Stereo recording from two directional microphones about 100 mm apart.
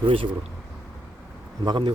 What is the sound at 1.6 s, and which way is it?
Speech, 55° right (ahead or behind).